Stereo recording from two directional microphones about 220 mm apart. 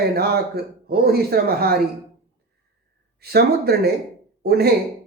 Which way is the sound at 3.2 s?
45° right (ahead or behind).